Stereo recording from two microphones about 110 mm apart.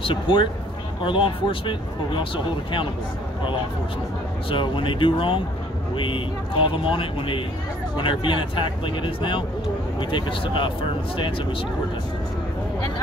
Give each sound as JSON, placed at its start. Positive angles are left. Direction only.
{"t": 0.0, "sound": "speech", "side_deg": 50}
{"t": 4.5, "sound": "speech", "side_deg": 50}